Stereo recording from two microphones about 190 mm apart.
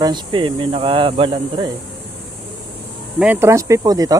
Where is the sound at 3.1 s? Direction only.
10° right (ahead or behind).